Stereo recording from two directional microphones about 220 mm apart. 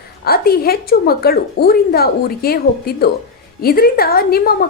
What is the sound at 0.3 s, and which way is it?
A woman's voice, 45° left (ahead or behind).